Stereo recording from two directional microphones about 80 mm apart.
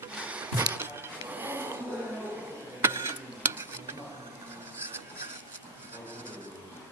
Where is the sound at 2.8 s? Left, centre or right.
Right.